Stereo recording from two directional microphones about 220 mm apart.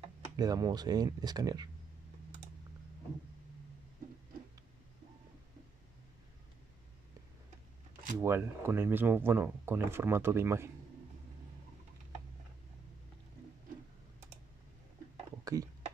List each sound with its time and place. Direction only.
0.4 s speech: 15° right (ahead or behind)
8.2 s speech: 10° right (ahead or behind)
15.4 s a sound: 15° right (ahead or behind)